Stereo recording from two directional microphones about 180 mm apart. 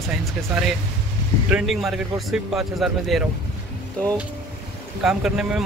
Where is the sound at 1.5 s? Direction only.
Centre (ahead or behind).